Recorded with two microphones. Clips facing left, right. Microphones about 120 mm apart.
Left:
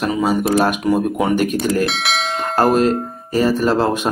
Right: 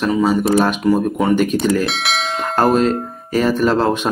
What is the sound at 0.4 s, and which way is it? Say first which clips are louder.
Speech: right 1 dB; 10° left (ahead or behind).